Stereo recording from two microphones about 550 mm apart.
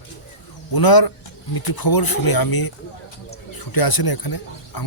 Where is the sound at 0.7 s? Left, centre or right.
Left.